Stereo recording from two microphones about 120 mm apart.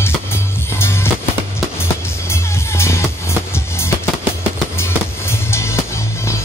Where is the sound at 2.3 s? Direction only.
20° left (ahead or behind).